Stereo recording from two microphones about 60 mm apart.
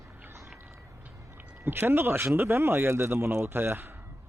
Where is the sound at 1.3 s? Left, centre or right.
Right.